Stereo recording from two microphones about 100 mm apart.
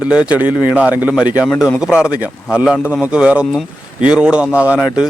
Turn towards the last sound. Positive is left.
turn(degrees=-5)  # may be behind; listen again after turning